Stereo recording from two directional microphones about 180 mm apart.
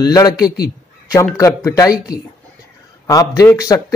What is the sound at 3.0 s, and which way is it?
Speech, 15° left (ahead or behind).